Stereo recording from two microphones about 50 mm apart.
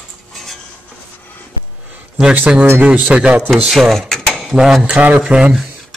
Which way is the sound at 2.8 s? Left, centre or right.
Right.